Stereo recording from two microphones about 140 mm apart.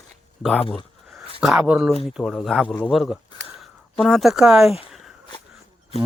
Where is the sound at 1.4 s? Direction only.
10° right (ahead or behind).